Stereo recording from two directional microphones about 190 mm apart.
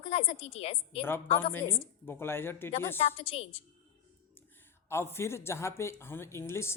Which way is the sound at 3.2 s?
30° left (ahead or behind).